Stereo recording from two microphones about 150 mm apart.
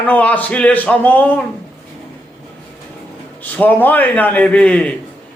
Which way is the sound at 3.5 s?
10° left (ahead or behind).